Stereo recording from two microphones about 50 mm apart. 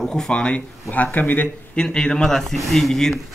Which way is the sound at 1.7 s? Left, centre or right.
Centre.